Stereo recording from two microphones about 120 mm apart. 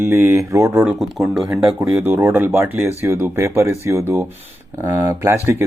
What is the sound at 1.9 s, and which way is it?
Speech, 15° right (ahead or behind).